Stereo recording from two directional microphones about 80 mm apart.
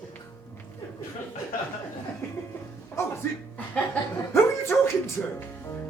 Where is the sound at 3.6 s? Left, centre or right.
Left.